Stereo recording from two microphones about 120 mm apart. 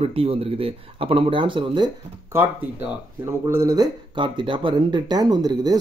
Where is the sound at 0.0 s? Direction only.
50° right (ahead or behind).